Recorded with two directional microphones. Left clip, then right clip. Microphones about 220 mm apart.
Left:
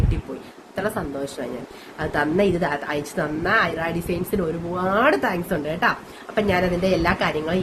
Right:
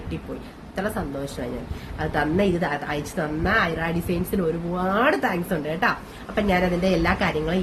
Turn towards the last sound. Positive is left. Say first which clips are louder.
# left 1 dB
turn(degrees=15)  # may be behind; listen again after turning